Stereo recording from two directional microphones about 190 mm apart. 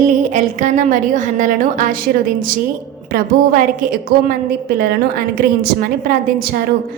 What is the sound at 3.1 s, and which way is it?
A woman's voice, 50° right (ahead or behind).